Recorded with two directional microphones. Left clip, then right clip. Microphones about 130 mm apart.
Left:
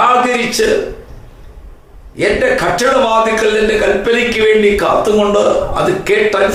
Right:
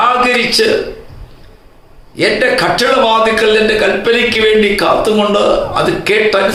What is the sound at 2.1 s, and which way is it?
A man's voice, 20° right (ahead or behind).